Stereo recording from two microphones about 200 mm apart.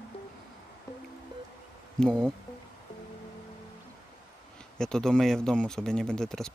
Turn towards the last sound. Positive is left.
turn(degrees=5)  # may be behind; listen again after turning